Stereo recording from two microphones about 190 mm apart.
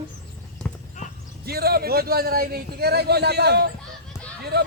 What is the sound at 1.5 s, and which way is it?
A man's voice, 55° right (ahead or behind).